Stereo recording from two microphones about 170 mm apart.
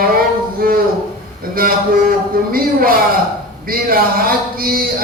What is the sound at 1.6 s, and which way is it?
A man's voice, 60° right (ahead or behind).